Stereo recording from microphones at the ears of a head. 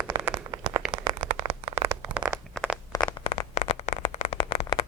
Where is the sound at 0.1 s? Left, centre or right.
Right.